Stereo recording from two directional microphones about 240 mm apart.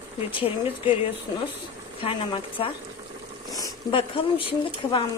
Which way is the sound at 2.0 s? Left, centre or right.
Left.